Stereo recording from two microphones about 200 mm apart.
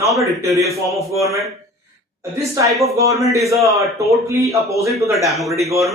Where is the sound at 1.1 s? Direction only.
15° right (ahead or behind).